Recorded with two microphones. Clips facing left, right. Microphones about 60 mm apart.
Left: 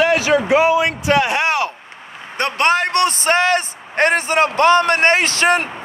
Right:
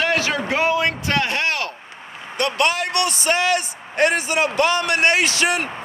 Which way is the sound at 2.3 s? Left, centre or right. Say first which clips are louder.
Left 4 dB; left.